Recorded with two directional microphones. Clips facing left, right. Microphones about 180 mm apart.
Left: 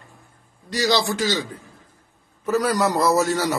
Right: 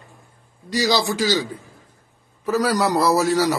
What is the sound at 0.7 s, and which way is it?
Speech, centre (ahead or behind).